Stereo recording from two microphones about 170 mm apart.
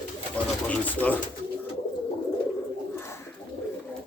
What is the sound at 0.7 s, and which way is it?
Speech, 10° left (ahead or behind).